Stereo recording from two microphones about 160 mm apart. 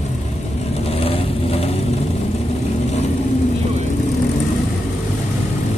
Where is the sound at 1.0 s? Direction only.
40° left (ahead or behind).